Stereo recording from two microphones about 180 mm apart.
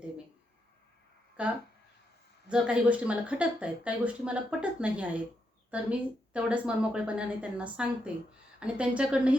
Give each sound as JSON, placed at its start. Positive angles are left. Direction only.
{"t": 1.4, "sound": "speech", "side_deg": -5}